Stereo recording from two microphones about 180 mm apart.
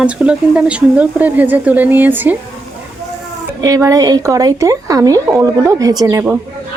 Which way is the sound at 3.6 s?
20° right (ahead or behind).